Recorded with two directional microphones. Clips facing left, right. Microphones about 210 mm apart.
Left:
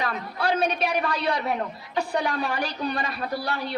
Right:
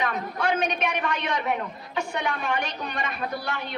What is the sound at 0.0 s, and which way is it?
A woman's voice, 35° left (ahead or behind).